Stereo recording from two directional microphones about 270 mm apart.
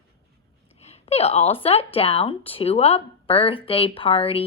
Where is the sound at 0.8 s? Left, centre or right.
Left.